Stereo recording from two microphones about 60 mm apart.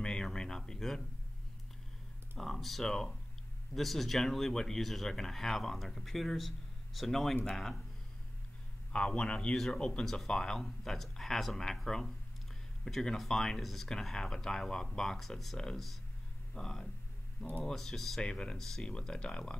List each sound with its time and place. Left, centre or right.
0.0 s a sound: centre
2.3 s speech: centre
8.9 s speech: centre
18.2 s speech: centre